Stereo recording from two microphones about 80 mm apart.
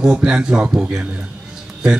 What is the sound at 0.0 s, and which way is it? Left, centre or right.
A man's voice, centre.